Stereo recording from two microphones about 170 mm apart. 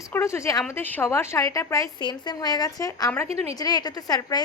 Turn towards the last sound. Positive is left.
turn(degrees=25)  # may be behind; listen again after turning